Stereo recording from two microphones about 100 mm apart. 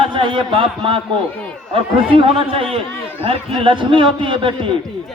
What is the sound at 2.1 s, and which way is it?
A man's voice, 65° right (ahead or behind).